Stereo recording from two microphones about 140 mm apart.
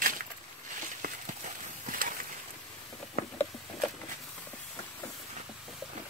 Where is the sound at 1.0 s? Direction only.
70° right (ahead or behind).